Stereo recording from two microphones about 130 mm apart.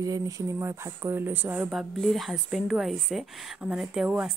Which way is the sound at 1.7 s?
Centre (ahead or behind).